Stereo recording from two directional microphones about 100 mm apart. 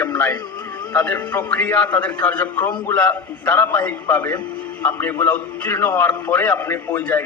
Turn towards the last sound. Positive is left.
turn(degrees=25)  # may be behind; listen again after turning